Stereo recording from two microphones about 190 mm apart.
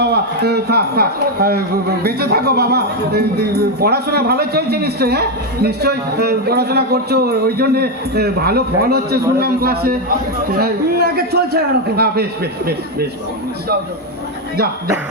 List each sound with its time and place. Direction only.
0.0 s a man's voice: 60° right (ahead or behind)